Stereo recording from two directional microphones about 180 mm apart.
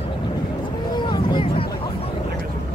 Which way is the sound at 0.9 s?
25° left (ahead or behind).